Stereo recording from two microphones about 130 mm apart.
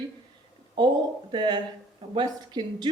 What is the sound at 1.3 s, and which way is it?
Speech, 35° right (ahead or behind).